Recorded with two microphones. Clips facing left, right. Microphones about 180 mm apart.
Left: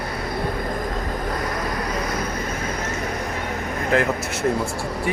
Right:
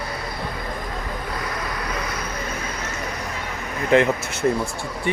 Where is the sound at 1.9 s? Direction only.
45° left (ahead or behind).